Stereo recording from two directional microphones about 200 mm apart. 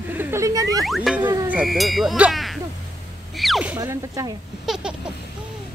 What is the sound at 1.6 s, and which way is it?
Speech, centre (ahead or behind).